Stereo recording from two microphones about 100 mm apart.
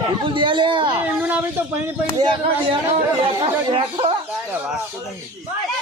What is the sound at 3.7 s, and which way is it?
Speech, 65° right (ahead or behind).